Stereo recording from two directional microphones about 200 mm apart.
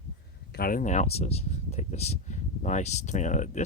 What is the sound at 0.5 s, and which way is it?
Speech, 45° left (ahead or behind).